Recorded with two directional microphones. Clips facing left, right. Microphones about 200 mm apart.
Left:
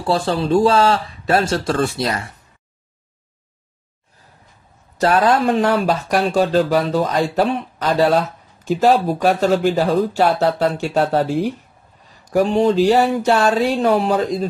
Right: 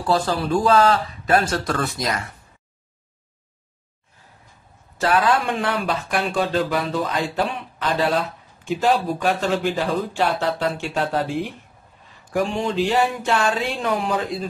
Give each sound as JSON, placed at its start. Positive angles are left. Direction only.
{"t": 0.0, "sound": "speech", "side_deg": 30}
{"t": 4.9, "sound": "speech", "side_deg": 35}
{"t": 12.3, "sound": "speech", "side_deg": 35}